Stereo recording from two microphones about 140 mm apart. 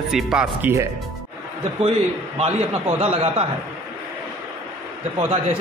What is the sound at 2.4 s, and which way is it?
A man's voice, 50° right (ahead or behind).